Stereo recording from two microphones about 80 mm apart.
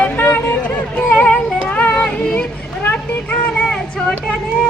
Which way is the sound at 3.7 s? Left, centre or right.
Centre.